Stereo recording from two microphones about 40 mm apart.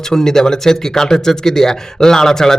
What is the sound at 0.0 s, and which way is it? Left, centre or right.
Speech, centre.